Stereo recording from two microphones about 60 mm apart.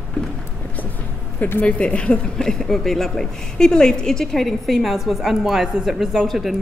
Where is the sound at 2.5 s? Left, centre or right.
Centre.